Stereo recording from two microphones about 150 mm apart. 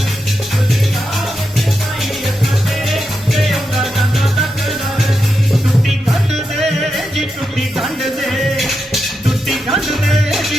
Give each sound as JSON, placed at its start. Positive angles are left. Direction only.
{"t": 2.9, "sound": "music", "side_deg": 0}
{"t": 6.1, "sound": "music", "side_deg": 0}